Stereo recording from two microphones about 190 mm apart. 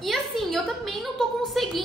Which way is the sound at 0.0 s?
Centre (ahead or behind).